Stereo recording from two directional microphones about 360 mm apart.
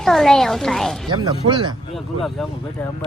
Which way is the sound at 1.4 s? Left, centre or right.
Centre.